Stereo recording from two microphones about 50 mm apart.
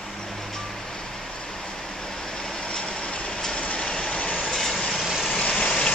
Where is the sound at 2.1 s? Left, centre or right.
Centre.